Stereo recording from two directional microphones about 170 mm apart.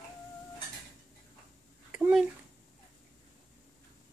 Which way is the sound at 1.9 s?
5° right (ahead or behind).